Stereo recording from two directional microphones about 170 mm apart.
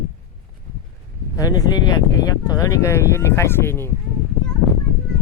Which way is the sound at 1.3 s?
20° left (ahead or behind).